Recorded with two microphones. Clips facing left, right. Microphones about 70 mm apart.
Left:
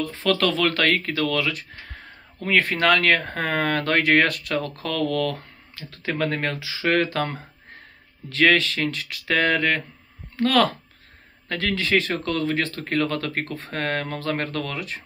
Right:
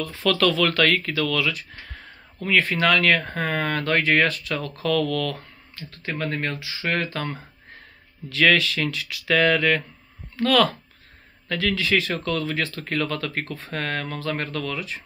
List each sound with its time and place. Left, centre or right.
0.0 s speech: left
5.8 s speech: left
8.3 s speech: left